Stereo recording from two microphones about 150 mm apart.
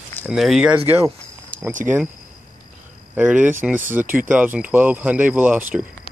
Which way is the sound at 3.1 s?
10° right (ahead or behind).